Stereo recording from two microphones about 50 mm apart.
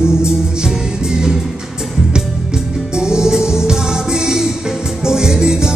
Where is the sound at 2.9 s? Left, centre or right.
Centre.